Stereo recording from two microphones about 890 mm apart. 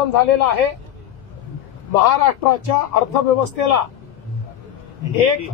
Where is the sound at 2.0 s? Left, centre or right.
Left.